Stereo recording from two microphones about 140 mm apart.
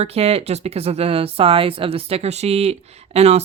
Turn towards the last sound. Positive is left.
turn(degrees=-50)  # may be behind; listen again after turning